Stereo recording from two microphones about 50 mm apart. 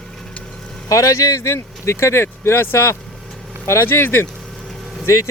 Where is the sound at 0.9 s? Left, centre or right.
Left.